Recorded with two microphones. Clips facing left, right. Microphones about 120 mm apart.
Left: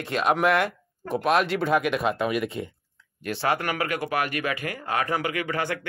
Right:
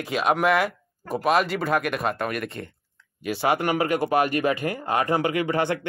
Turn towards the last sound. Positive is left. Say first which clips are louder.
# right 4 dB
turn(degrees=-25)  # may be behind; listen again after turning